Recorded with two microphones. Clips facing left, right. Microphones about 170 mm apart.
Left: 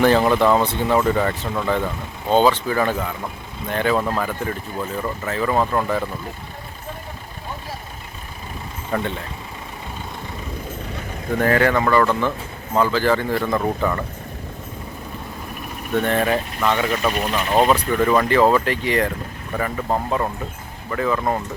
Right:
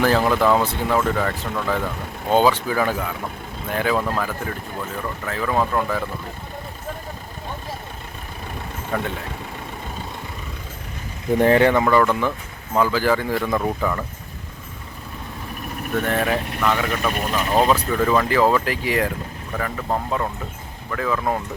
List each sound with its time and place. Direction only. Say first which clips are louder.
0.0 s speech: left 2 dB; centre (ahead or behind)
5.2 s speech: left 1 dB; 5° left (ahead or behind)
8.9 s speech: left 2 dB; 5° left (ahead or behind)
11.3 s speech: right 2 dB; 25° right (ahead or behind); by 14.0 s centre (ahead or behind)
16.0 s speech: left 2 dB; centre (ahead or behind)
19.5 s speech: left 2 dB; 5° left (ahead or behind)